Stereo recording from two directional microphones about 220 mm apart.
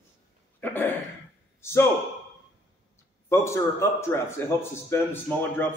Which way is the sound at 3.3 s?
10° left (ahead or behind).